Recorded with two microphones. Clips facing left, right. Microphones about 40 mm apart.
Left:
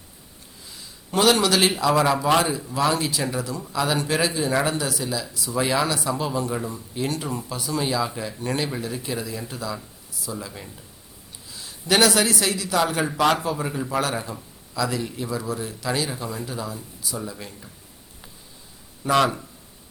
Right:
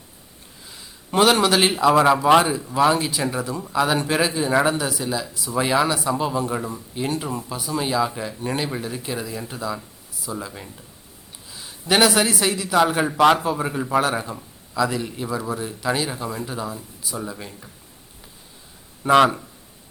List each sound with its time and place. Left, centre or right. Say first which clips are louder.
1.1 s a man's voice: right 2 dB; centre
5.6 s speech: right 3 dB; centre
10.5 s speech: right 1 dB; centre
11.9 s speech: right 1 dB; centre
19.0 s a man's voice: right 5 dB; right